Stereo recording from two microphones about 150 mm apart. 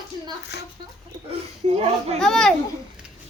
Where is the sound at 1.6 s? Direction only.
50° right (ahead or behind).